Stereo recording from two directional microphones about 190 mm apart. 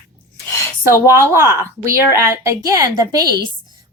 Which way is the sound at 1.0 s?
15° right (ahead or behind).